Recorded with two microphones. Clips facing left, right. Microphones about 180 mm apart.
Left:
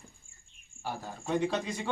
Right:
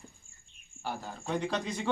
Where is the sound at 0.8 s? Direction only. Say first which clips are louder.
Even; 10° left (ahead or behind).